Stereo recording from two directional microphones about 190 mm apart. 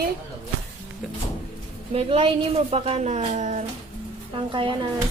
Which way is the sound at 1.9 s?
30° right (ahead or behind).